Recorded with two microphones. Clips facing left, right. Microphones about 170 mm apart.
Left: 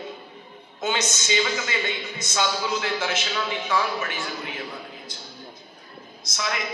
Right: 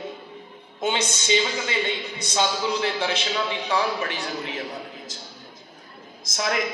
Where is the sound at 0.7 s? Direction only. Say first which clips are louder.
Right 1 dB; 30° right (ahead or behind).